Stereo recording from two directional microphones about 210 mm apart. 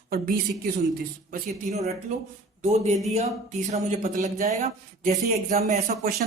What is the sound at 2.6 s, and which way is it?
Speech, 30° right (ahead or behind).